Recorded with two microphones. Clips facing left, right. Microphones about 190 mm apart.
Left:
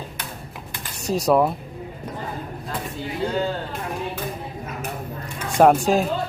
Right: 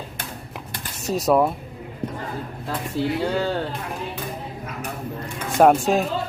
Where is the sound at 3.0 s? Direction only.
30° right (ahead or behind).